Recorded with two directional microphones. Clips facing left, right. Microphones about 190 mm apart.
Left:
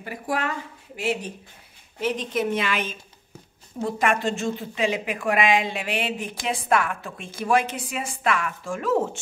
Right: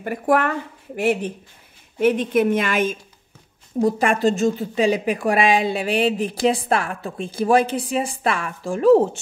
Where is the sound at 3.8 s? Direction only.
35° right (ahead or behind).